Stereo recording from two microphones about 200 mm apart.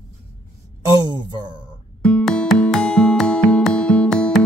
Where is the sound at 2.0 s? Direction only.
Centre (ahead or behind).